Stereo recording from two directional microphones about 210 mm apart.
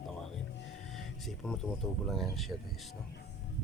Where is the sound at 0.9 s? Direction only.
Centre (ahead or behind).